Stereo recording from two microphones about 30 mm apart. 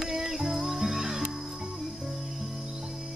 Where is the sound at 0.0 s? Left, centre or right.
Centre.